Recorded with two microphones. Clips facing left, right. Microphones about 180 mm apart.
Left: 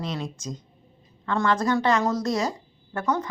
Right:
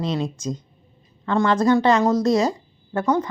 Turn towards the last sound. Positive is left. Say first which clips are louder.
# right 6 dB
turn(degrees=-20)  # may be behind; listen again after turning